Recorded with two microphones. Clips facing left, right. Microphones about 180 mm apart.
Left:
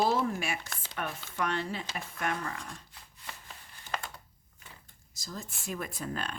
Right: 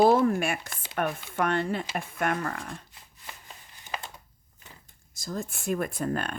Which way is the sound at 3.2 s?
15° right (ahead or behind).